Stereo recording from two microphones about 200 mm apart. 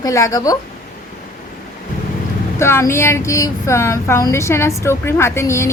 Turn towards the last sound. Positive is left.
turn(degrees=15)  # may be behind; listen again after turning